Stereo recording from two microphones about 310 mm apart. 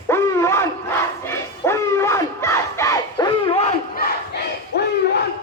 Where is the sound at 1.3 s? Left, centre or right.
Centre.